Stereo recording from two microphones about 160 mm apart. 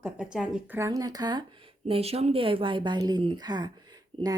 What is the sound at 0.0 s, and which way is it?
A woman's voice, 5° right (ahead or behind).